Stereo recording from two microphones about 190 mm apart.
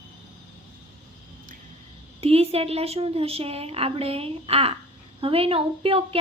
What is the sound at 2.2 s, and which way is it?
A woman's voice, 30° right (ahead or behind).